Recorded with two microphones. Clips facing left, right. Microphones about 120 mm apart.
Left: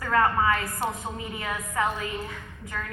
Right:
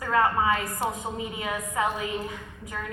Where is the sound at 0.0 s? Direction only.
20° right (ahead or behind).